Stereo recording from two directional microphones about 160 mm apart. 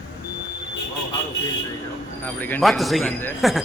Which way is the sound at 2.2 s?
10° left (ahead or behind).